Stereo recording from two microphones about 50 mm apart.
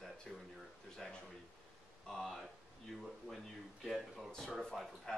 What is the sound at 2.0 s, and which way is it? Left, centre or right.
Speech, centre.